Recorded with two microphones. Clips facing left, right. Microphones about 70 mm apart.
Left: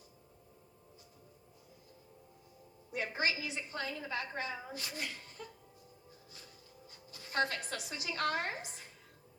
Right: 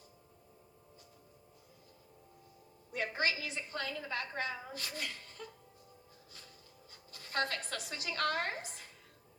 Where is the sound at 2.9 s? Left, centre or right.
Left.